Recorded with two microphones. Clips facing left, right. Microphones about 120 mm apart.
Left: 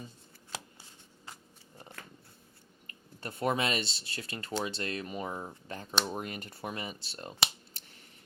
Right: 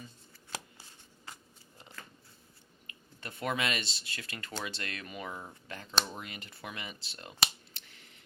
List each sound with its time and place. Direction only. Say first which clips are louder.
1.8 s biting: left 2 dB; 60° left (ahead or behind)
3.2 s speech: left 4 dB; 35° left (ahead or behind)